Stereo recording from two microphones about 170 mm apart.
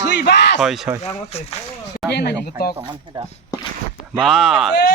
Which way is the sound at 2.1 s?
75° left (ahead or behind).